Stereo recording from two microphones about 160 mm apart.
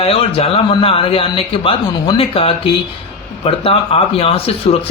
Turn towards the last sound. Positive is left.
turn(degrees=35)  # may be behind; listen again after turning